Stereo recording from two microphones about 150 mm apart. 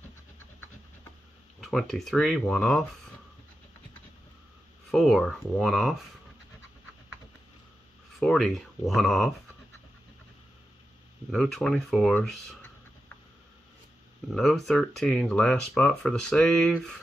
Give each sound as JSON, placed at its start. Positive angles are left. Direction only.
{"t": 1.6, "sound": "speech", "side_deg": 0}
{"t": 4.9, "sound": "speech", "side_deg": 0}
{"t": 8.2, "sound": "speech", "side_deg": 0}
{"t": 11.2, "sound": "speech", "side_deg": 0}
{"t": 14.3, "sound": "speech", "side_deg": 0}